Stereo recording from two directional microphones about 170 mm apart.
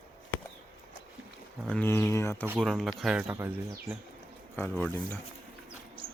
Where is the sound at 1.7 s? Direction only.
10° left (ahead or behind).